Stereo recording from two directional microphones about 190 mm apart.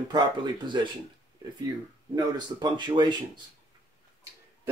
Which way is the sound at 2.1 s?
20° right (ahead or behind).